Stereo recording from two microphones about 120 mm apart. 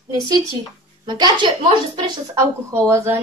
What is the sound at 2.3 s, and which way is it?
Speech, 25° right (ahead or behind).